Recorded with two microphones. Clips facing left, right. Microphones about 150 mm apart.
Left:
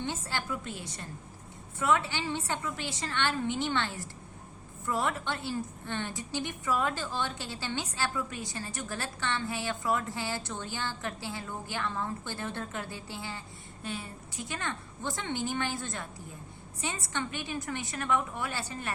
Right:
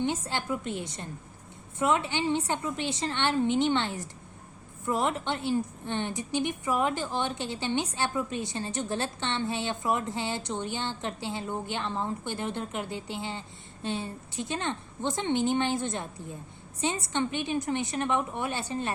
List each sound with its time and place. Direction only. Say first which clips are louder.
0.0 s a woman's voice: right 5 dB; 20° right (ahead or behind)